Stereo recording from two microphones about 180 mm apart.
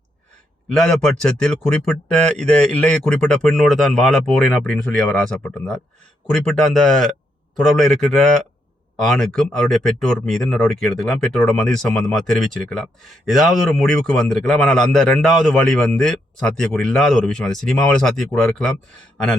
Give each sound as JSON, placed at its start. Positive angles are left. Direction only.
{"t": 0.7, "sound": "a man's voice", "side_deg": 5}